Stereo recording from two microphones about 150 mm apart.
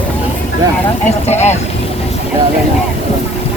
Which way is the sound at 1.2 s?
45° left (ahead or behind).